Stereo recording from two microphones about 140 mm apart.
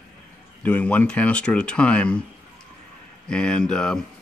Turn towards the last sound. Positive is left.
turn(degrees=5)  # may be behind; listen again after turning